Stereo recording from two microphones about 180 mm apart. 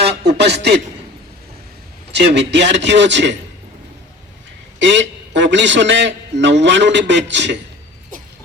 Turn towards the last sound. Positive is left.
turn(degrees=-75)  # may be behind; listen again after turning